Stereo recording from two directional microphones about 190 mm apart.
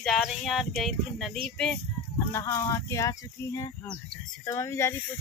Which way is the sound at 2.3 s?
15° left (ahead or behind).